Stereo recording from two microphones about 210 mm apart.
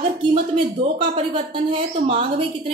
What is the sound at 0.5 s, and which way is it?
Speech, 25° right (ahead or behind).